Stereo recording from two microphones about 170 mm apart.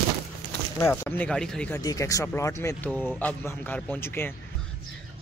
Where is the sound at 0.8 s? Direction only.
15° left (ahead or behind).